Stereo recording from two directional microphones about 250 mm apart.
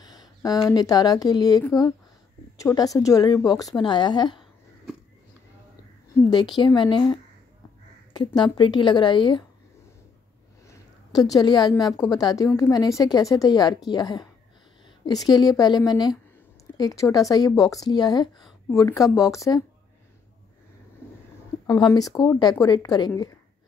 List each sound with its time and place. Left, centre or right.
0.0 s a woman's voice: centre
6.6 s a woman's voice: centre
10.7 s a woman's voice: centre
21.0 s a sound: centre
21.6 s a woman's voice: centre